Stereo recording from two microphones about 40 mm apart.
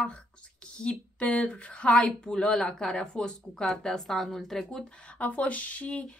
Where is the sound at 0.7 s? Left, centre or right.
Left.